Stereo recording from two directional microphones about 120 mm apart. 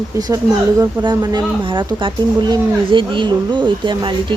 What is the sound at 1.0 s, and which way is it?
Speech, 35° right (ahead or behind).